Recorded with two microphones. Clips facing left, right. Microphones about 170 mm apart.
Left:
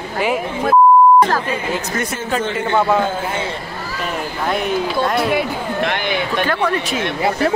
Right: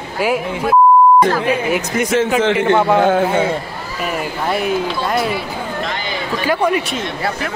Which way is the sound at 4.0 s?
5° right (ahead or behind).